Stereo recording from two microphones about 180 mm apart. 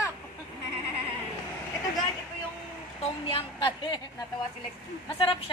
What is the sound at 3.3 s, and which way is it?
Speech, 30° left (ahead or behind).